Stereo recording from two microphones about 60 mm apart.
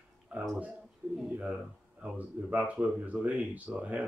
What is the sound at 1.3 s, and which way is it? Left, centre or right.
Speech, right.